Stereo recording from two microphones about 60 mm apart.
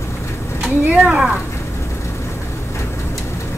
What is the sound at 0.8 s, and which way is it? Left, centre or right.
Speech, right.